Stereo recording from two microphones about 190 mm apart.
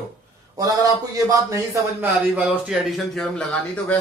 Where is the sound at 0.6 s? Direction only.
20° right (ahead or behind).